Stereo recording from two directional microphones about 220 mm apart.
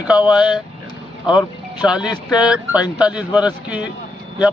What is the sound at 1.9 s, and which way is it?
Speech, 5° right (ahead or behind).